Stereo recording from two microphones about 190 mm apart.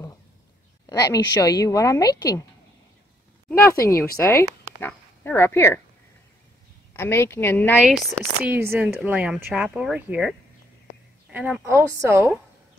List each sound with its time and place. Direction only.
0.8 s a woman's voice: 20° left (ahead or behind)
3.4 s a woman's voice: 10° left (ahead or behind)
7.0 s a woman's voice: 15° left (ahead or behind)
7.8 s speech: 10° right (ahead or behind)